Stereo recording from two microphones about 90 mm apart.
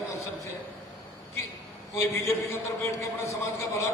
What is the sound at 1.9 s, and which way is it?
A man's voice, 30° left (ahead or behind).